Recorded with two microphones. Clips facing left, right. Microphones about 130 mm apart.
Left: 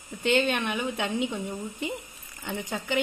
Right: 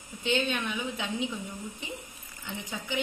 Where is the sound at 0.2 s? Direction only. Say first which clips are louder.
Left 5 dB; 60° left (ahead or behind).